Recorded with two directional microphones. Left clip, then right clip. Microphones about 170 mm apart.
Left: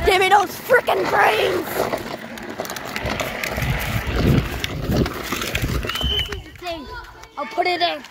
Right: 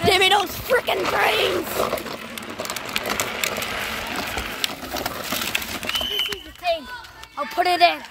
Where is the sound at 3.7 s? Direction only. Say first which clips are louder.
Even; 35° right (ahead or behind).